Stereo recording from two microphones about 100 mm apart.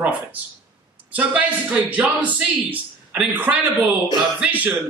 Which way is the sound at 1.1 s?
15° right (ahead or behind).